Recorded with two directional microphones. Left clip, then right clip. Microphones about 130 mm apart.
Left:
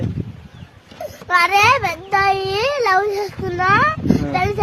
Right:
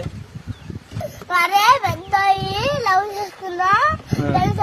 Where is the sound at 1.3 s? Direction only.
35° left (ahead or behind).